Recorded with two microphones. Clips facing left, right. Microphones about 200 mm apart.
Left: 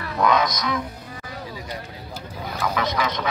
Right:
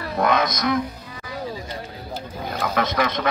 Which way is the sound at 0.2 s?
55° right (ahead or behind).